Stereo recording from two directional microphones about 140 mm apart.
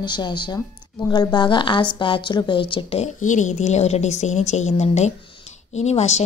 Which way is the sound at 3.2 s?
60° left (ahead or behind).